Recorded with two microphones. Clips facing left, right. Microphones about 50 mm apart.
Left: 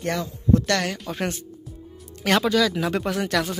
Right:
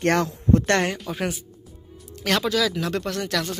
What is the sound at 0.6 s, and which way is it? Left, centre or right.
Speech, right.